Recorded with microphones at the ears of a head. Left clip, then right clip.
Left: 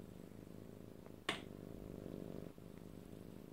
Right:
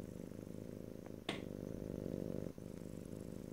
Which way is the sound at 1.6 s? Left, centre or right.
Right.